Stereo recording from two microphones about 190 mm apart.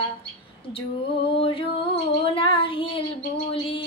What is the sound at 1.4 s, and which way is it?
Female singing, 30° left (ahead or behind).